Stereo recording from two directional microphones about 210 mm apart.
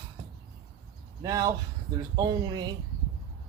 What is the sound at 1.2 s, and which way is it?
Speech, 15° right (ahead or behind).